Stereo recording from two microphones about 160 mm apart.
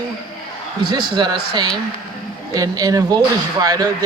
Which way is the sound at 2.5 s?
20° right (ahead or behind).